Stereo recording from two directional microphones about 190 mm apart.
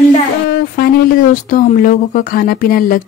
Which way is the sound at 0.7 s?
50° left (ahead or behind).